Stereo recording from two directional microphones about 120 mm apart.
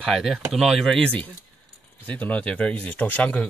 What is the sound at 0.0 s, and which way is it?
Speech, centre (ahead or behind).